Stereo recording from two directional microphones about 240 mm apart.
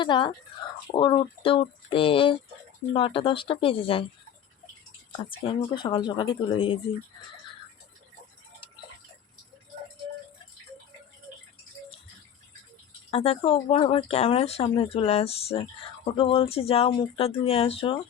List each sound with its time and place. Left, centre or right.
0.0 s speech: centre
5.5 s speech: centre
13.1 s speech: left